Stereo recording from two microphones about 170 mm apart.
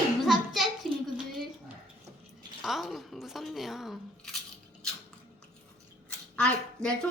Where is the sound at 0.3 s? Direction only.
Centre (ahead or behind).